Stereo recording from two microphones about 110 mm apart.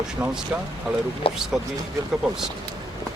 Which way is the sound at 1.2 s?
55° left (ahead or behind).